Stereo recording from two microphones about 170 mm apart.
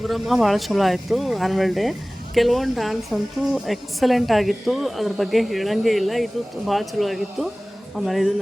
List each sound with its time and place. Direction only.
0.0 s speech: centre (ahead or behind)